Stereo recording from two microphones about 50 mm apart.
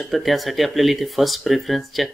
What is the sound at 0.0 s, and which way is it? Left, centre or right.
Speech, centre.